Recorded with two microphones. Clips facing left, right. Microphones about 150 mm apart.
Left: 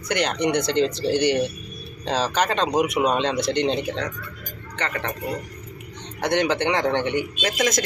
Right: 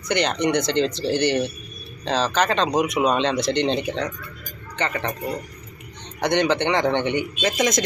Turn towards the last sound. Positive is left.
turn(degrees=0)  # may be behind; listen again after turning